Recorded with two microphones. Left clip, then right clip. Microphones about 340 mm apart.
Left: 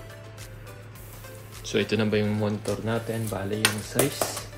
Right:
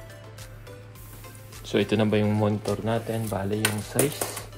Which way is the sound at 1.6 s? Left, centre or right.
Centre.